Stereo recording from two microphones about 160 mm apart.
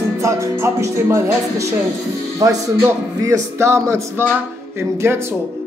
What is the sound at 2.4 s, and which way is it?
Speech, 20° right (ahead or behind).